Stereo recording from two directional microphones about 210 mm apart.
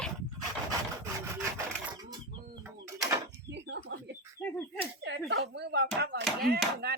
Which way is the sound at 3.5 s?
55° right (ahead or behind).